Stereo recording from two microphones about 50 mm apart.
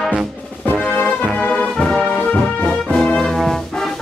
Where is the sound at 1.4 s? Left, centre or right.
Left.